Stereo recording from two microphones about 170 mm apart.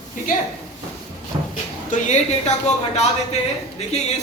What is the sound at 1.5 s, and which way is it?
A woman's voice, 45° left (ahead or behind).